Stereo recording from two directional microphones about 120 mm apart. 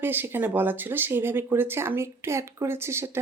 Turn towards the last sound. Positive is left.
turn(degrees=-20)  # may be behind; listen again after turning